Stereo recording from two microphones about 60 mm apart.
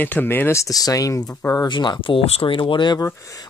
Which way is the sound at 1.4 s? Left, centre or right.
Left.